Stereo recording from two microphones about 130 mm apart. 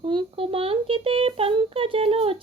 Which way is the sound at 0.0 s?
40° right (ahead or behind).